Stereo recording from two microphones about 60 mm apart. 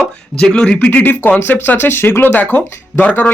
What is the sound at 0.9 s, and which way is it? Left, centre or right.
Speech, left.